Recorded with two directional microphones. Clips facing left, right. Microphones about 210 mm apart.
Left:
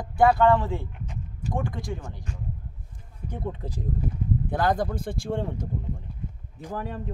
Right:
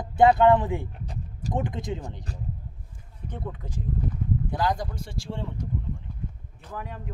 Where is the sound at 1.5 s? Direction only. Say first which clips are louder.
Right 1 dB; 20° right (ahead or behind).